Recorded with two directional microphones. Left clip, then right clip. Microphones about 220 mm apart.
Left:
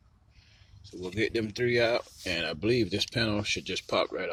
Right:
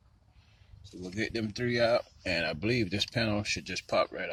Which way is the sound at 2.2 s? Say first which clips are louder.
Left 1 dB; 20° right (ahead or behind).